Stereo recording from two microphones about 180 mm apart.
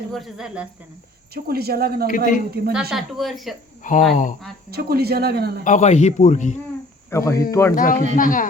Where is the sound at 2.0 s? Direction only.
50° left (ahead or behind).